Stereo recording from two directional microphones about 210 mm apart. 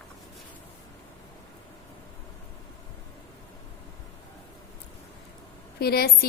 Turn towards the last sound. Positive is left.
turn(degrees=45)  # may be behind; listen again after turning